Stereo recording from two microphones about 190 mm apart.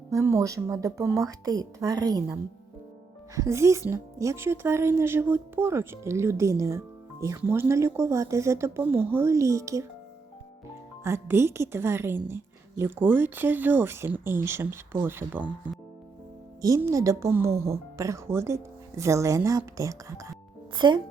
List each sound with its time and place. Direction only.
0.1 s speech: 15° right (ahead or behind)
11.0 s speech: 15° right (ahead or behind)